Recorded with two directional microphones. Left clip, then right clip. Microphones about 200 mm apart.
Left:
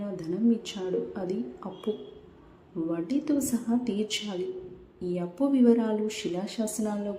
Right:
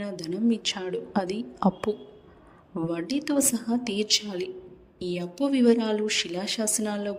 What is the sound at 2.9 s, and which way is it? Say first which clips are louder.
A woman's voice: right 1 dB; 45° right (ahead or behind).